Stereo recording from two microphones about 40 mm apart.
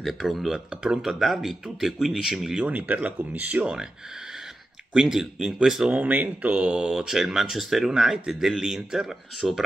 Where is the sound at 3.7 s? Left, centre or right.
Centre.